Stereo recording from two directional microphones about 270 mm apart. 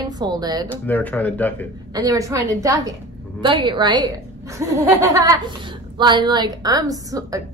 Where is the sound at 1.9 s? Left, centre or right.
Centre.